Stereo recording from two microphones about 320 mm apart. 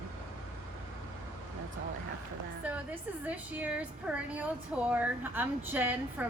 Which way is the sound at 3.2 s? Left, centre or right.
Centre.